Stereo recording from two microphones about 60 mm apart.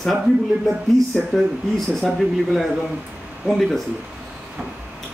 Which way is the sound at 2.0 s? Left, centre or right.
Centre.